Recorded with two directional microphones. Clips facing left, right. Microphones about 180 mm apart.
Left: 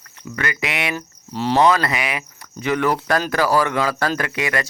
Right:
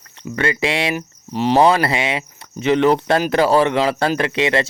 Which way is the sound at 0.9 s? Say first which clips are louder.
Right 4 dB; 15° right (ahead or behind).